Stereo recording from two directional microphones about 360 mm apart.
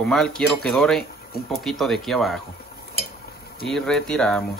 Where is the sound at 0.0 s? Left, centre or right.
Centre.